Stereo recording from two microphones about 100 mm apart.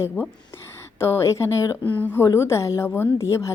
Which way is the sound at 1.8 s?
15° left (ahead or behind).